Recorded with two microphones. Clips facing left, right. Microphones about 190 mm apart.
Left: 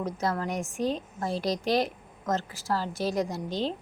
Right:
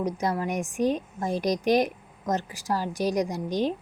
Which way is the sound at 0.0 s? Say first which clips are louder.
Right 2 dB; 15° right (ahead or behind).